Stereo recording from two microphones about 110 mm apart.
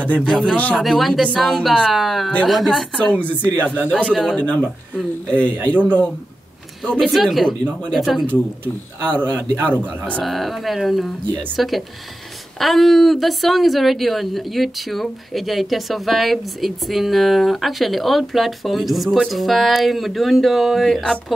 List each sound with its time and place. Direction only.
0.0 s speech: 10° left (ahead or behind)
0.7 s a woman's voice: centre (ahead or behind)
3.6 s a man's voice: 15° right (ahead or behind)
4.1 s a woman's voice: centre (ahead or behind)
4.4 s speech: 10° left (ahead or behind)
5.7 s a man's voice: 15° right (ahead or behind)
6.8 s a woman's voice: centre (ahead or behind)
9.0 s a man's voice: 15° right (ahead or behind)
9.3 s a woman's voice: 10° left (ahead or behind)